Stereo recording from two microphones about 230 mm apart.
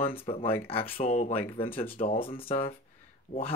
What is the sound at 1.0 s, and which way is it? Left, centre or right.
Speech, left.